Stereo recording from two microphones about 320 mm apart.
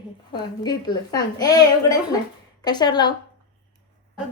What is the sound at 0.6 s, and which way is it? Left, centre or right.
A woman's voice, centre.